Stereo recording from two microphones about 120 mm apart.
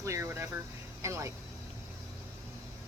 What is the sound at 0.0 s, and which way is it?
A woman's voice, 25° right (ahead or behind).